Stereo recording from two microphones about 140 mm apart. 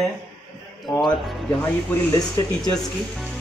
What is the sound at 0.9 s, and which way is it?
Speech, 20° left (ahead or behind).